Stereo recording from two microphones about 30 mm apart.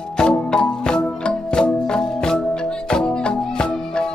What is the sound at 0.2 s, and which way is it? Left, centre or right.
Music, left.